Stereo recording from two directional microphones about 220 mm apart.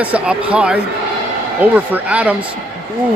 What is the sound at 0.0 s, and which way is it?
Speech, 5° right (ahead or behind).